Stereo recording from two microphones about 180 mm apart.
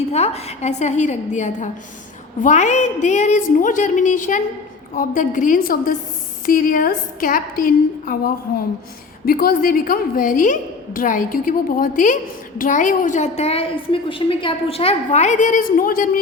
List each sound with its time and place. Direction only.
0.1 s a woman's voice: 35° left (ahead or behind)